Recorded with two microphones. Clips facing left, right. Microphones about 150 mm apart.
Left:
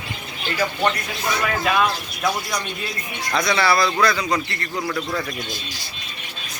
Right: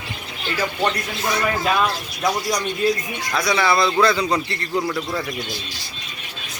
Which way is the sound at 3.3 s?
10° right (ahead or behind).